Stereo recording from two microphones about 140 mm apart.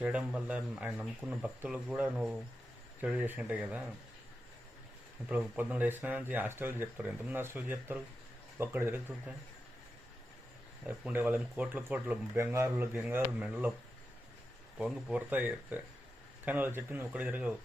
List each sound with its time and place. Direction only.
0.0 s speech: 10° right (ahead or behind)
5.3 s speech: 10° right (ahead or behind)
10.8 s speech: 10° right (ahead or behind)
14.8 s speech: 5° right (ahead or behind)